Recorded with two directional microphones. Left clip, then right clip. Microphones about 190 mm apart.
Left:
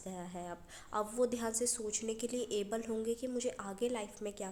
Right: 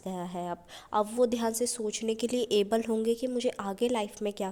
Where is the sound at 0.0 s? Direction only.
35° right (ahead or behind).